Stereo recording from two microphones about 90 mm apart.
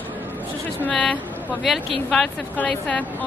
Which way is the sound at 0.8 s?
15° left (ahead or behind).